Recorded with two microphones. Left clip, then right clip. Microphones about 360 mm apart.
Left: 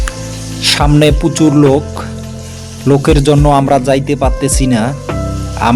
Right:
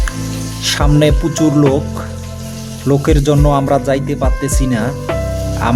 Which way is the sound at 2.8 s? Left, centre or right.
Right.